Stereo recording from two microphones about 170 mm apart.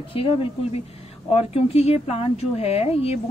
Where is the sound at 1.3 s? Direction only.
35° left (ahead or behind).